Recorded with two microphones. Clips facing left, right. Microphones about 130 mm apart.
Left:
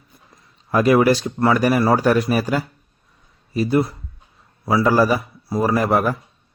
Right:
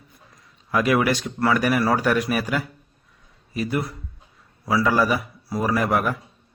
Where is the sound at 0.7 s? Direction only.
35° left (ahead or behind).